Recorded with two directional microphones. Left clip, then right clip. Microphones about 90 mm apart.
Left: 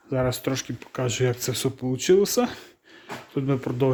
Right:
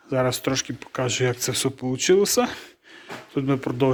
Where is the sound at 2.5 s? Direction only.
60° left (ahead or behind).